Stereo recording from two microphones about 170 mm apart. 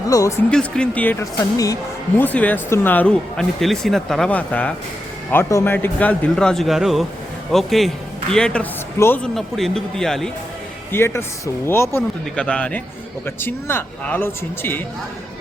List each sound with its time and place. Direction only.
0.1 s speech: 20° left (ahead or behind)
0.5 s speech: 5° left (ahead or behind)
10.9 s speech: 15° left (ahead or behind)